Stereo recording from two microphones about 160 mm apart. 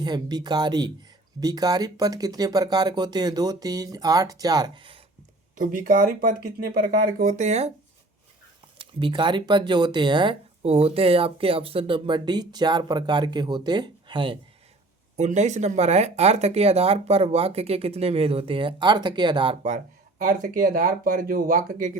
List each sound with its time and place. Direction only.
0.0 s speech: 25° right (ahead or behind)
5.5 s speech: 60° right (ahead or behind)
8.8 s speech: 30° right (ahead or behind)
15.1 s speech: 45° right (ahead or behind); by 19.5 s 30° right (ahead or behind)
20.2 s speech: 55° right (ahead or behind)